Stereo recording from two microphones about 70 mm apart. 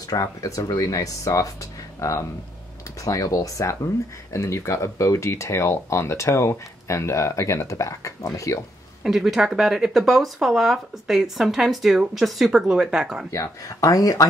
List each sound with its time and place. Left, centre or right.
0.0 s speech: left
9.0 s speech: centre
13.3 s speech: left